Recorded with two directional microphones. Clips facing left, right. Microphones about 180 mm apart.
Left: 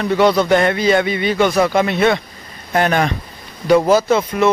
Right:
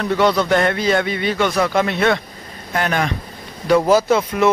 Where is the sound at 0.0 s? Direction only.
10° left (ahead or behind).